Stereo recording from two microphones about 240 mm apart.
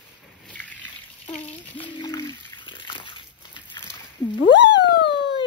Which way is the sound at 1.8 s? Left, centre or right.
Centre.